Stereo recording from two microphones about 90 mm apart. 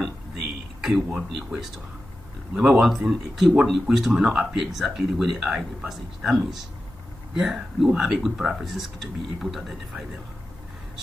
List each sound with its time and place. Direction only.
0.7 s speech: 5° right (ahead or behind)